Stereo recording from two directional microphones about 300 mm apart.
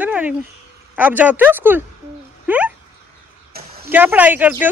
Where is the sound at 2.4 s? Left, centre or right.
Centre.